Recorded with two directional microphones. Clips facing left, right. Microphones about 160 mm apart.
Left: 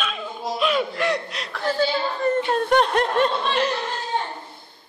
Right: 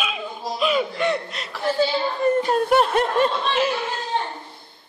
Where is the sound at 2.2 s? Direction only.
10° right (ahead or behind).